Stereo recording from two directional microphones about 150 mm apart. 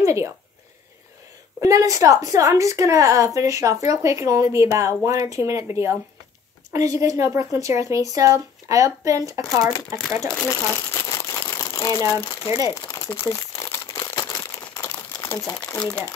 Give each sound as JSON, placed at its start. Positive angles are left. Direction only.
{"t": 0.0, "sound": "a woman's voice", "side_deg": -20}
{"t": 1.6, "sound": "a woman's voice", "side_deg": -20}
{"t": 10.5, "sound": "crumpling", "side_deg": 20}